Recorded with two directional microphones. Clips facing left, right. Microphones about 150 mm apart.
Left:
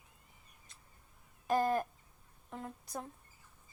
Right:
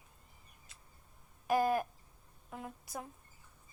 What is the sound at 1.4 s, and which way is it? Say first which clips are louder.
Owl: right 1 dB; 10° right (ahead or behind).